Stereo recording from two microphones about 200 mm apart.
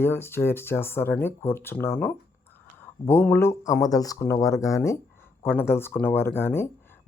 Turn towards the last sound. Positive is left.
turn(degrees=10)  # may be behind; listen again after turning